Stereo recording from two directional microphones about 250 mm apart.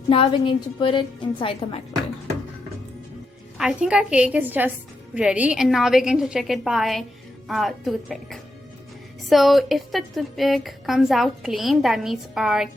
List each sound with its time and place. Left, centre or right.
0.1 s a woman's voice: left
3.6 s a woman's voice: centre